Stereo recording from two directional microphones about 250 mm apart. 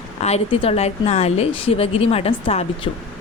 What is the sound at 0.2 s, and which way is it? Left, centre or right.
A woman's voice, left.